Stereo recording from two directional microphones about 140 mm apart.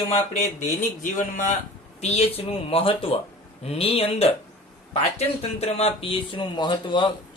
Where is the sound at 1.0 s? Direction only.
65° left (ahead or behind).